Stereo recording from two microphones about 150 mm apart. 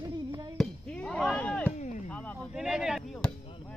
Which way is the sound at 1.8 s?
55° left (ahead or behind).